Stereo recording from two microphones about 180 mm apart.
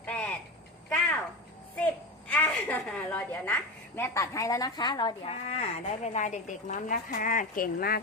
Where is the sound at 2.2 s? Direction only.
10° left (ahead or behind).